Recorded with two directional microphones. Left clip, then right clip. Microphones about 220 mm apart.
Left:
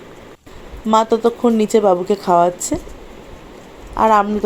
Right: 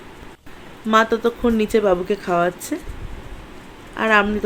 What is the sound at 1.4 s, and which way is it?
A woman's voice, 15° left (ahead or behind).